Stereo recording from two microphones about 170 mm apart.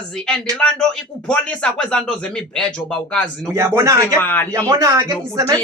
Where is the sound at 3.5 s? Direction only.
15° right (ahead or behind).